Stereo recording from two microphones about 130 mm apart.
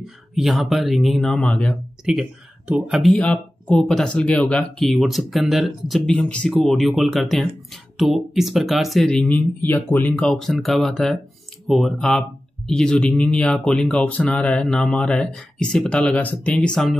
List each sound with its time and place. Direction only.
0.0 s speech: centre (ahead or behind)
2.0 s speech: 5° right (ahead or behind)
3.0 s speech: 5° left (ahead or behind)
10.1 s speech: centre (ahead or behind)